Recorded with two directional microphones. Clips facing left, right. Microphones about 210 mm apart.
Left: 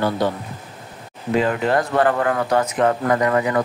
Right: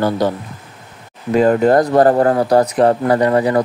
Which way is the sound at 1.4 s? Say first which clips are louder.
Right 8 dB; 40° right (ahead or behind).